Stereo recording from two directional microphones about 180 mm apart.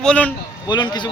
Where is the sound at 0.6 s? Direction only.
25° left (ahead or behind).